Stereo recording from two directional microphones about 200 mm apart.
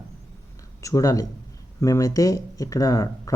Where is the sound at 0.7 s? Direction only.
15° left (ahead or behind).